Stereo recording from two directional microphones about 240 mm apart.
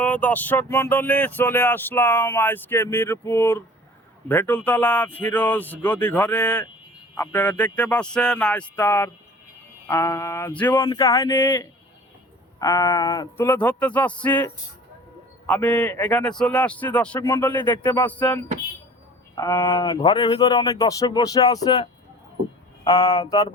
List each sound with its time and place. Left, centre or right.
0.0 s speech: centre
19.4 s speech: centre